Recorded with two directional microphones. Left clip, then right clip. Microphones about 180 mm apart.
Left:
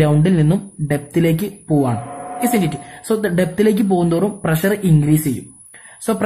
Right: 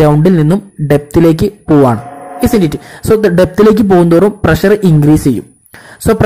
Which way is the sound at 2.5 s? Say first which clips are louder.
Right 8 dB; 30° right (ahead or behind).